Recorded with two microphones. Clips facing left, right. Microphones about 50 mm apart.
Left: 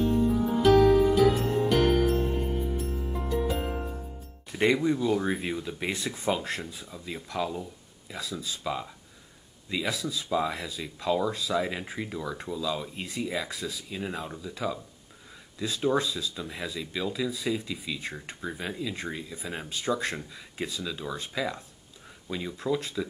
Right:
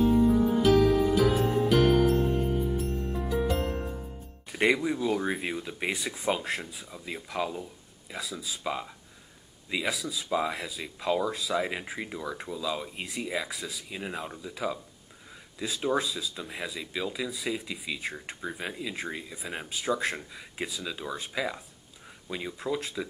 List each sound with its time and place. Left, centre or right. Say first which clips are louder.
0.0 s music: right 3 dB; centre
4.5 s music: even; centre
4.8 s speech: left 2 dB; centre